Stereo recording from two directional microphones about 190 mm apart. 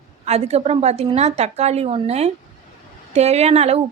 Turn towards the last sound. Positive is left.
turn(degrees=-35)  # may be behind; listen again after turning